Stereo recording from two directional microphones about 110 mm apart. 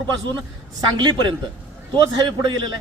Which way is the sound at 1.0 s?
45° right (ahead or behind).